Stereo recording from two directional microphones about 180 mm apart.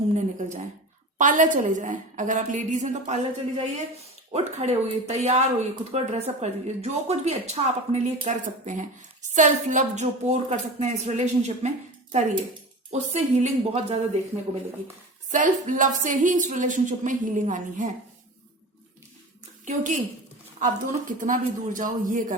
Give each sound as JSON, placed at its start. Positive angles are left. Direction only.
{"t": 0.1, "sound": "a woman's voice", "side_deg": -40}
{"t": 12.9, "sound": "speech", "side_deg": -35}
{"t": 15.3, "sound": "a woman's voice", "side_deg": -45}
{"t": 19.6, "sound": "a woman's voice", "side_deg": -45}